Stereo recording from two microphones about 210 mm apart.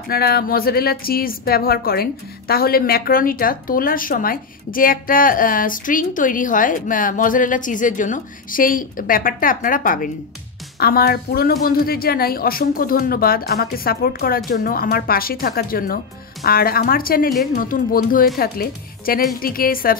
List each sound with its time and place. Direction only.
0.1 s a woman's voice: 45° left (ahead or behind)